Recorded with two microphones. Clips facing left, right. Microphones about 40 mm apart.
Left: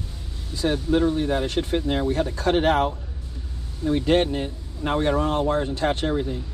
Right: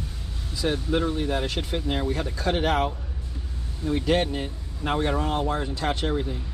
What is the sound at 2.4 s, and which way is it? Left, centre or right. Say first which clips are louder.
Speech: left 4 dB; left.